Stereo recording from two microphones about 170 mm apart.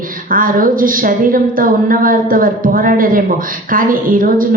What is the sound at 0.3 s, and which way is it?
A woman's voice, 55° right (ahead or behind).